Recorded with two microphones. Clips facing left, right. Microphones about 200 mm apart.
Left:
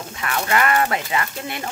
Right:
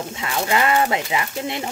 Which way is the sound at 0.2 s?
20° right (ahead or behind).